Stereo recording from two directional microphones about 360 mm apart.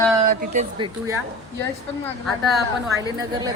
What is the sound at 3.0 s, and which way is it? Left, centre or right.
Speech, centre.